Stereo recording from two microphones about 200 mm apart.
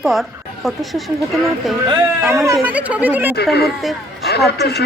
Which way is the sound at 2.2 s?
15° right (ahead or behind).